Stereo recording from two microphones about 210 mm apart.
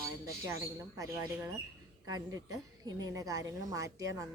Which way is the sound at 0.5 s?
15° right (ahead or behind).